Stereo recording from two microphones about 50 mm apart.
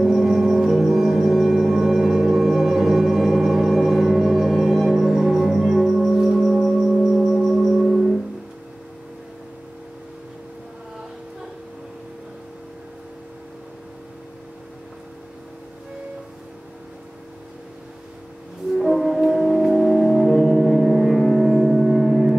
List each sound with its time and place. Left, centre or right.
0.0 s music: centre
18.8 s music: centre